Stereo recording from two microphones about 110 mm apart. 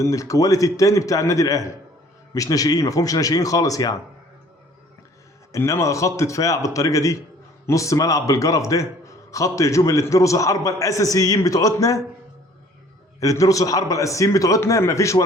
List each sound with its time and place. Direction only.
0.0 s a man's voice: 30° left (ahead or behind)
5.5 s a man's voice: 25° left (ahead or behind)
13.1 s a man's voice: 30° left (ahead or behind)